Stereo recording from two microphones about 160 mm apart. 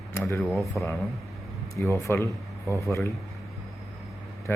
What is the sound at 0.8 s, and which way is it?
Speech, centre (ahead or behind).